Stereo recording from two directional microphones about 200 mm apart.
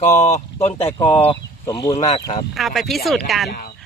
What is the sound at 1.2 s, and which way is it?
Speech, 20° left (ahead or behind).